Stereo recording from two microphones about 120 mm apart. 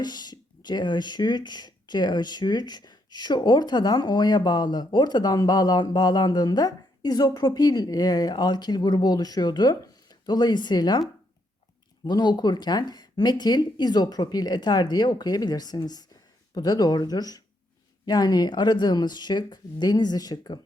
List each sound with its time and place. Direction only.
0.0 s speech: 35° left (ahead or behind)
12.0 s speech: 35° left (ahead or behind)